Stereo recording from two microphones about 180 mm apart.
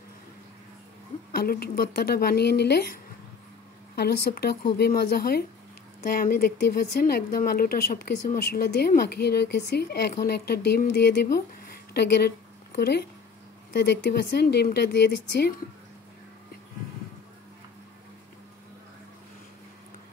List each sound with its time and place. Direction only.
1.3 s speech: 60° left (ahead or behind)